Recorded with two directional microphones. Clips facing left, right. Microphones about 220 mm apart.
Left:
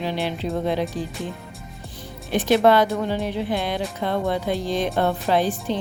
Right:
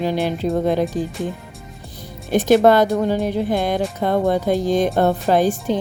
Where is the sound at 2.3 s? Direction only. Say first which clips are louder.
Right 4 dB; 45° right (ahead or behind).